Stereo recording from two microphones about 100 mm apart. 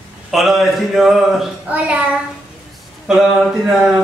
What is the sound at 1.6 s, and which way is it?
Speech, 15° right (ahead or behind).